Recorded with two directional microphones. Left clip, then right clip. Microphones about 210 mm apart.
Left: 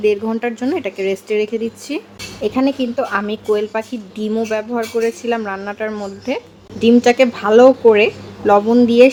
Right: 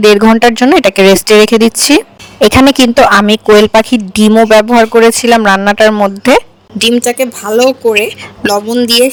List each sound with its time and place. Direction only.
0.0 s speech: 50° right (ahead or behind)
7.0 s speech: centre (ahead or behind)